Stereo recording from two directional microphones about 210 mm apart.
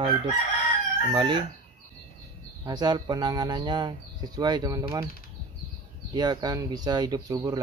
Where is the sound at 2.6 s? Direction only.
20° right (ahead or behind).